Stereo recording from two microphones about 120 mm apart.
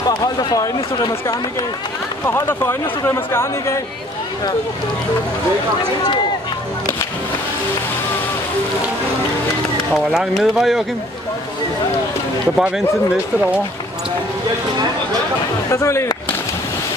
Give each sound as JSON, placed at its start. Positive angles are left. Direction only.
{"t": 0.4, "sound": "speech", "side_deg": 35}
{"t": 2.2, "sound": "speech", "side_deg": 20}
{"t": 10.1, "sound": "speech", "side_deg": 0}
{"t": 12.5, "sound": "speech", "side_deg": -5}
{"t": 15.7, "sound": "speech", "side_deg": 25}